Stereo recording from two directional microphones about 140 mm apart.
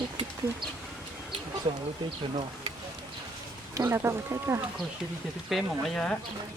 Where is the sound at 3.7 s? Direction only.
20° right (ahead or behind).